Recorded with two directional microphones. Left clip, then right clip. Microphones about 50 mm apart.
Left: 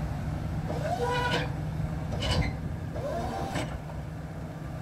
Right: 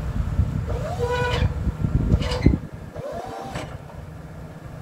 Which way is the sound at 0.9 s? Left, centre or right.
Centre.